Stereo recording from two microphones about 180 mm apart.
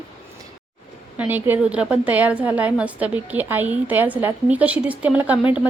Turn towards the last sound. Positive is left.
turn(degrees=-5)  # may be behind; listen again after turning